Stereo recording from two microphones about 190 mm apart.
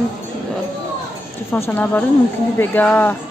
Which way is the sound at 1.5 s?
10° left (ahead or behind).